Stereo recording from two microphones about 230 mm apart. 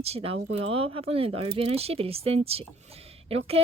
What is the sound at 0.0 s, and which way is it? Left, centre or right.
Speech, right.